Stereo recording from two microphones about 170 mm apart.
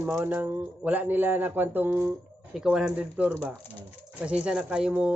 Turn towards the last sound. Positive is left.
turn(degrees=-5)  # may be behind; listen again after turning